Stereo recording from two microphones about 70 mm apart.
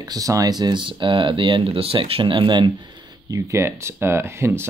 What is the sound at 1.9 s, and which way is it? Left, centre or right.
Speech, right.